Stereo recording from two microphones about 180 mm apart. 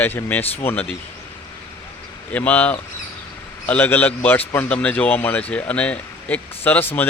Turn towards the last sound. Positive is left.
turn(degrees=10)  # may be behind; listen again after turning